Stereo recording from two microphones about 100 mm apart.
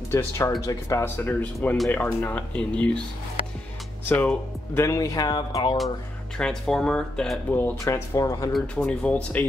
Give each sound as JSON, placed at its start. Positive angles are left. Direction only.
{"t": 0.1, "sound": "speech", "side_deg": 25}
{"t": 1.0, "sound": "speech", "side_deg": 20}
{"t": 4.1, "sound": "speech", "side_deg": 20}
{"t": 4.8, "sound": "speech", "side_deg": 30}
{"t": 6.3, "sound": "speech", "side_deg": 5}
{"t": 7.8, "sound": "speech", "side_deg": 30}
{"t": 8.7, "sound": "speech", "side_deg": 15}